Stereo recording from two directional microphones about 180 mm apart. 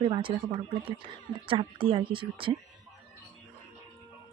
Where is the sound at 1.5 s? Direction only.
30° right (ahead or behind).